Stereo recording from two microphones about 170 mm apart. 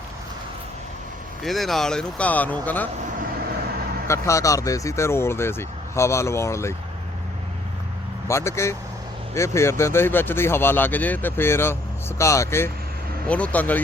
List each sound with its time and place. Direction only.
1.5 s speech: centre (ahead or behind)
4.0 s speech: 15° left (ahead or behind)
8.3 s speech: 15° left (ahead or behind)